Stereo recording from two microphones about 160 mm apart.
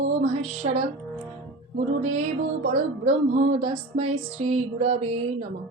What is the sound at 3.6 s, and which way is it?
Speech, 45° right (ahead or behind).